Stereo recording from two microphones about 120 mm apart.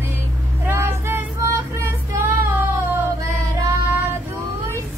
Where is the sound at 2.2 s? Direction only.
20° right (ahead or behind).